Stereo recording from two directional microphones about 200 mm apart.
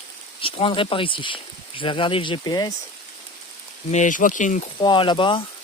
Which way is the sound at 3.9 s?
40° left (ahead or behind).